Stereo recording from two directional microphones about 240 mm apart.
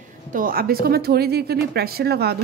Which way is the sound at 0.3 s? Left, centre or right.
Right.